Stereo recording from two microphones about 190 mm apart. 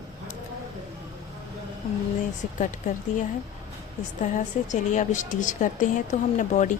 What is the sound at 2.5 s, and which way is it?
Speech, 40° left (ahead or behind).